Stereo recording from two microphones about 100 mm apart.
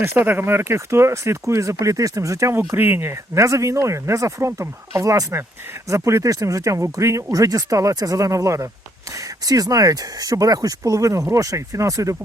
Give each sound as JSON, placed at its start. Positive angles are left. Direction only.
{"t": 0.0, "sound": "speech", "side_deg": -20}